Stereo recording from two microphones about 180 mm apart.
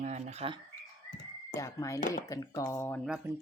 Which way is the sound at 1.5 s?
15° left (ahead or behind).